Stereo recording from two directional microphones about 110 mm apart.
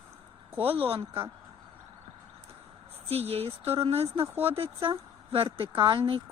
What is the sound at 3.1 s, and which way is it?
Speech, 65° right (ahead or behind).